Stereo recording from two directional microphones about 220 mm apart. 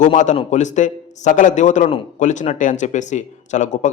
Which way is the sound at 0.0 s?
35° left (ahead or behind).